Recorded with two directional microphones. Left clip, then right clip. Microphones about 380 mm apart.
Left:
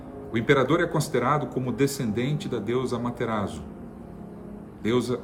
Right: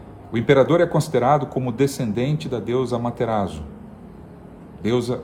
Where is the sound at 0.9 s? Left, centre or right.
Right.